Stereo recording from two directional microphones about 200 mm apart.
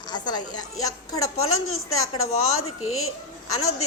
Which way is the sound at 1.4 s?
90° left.